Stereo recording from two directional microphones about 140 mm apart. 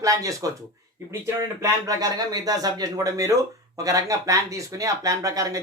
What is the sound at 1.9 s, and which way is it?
A man's voice, 25° right (ahead or behind).